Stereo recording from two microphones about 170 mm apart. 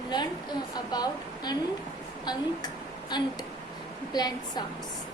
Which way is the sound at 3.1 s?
25° left (ahead or behind).